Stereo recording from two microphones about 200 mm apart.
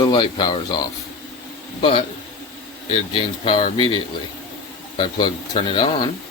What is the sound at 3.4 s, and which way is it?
Speech, 25° left (ahead or behind).